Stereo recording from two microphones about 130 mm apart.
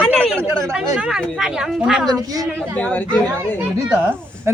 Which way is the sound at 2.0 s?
30° right (ahead or behind).